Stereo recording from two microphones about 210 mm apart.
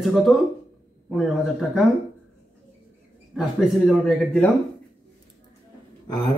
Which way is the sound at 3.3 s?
Centre (ahead or behind).